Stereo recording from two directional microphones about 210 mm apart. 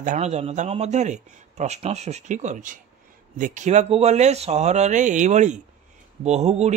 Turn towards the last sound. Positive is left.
turn(degrees=-30)  # may be behind; listen again after turning